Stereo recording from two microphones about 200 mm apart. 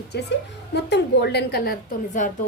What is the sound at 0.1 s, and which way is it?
A woman's voice, 55° left (ahead or behind).